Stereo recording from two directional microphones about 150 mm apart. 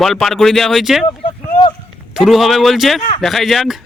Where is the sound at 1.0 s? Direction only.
30° left (ahead or behind).